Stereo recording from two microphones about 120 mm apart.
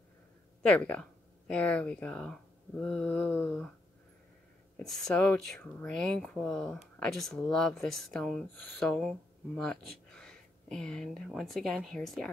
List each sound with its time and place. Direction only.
0.6 s speech: 10° left (ahead or behind)
4.7 s speech: 5° left (ahead or behind)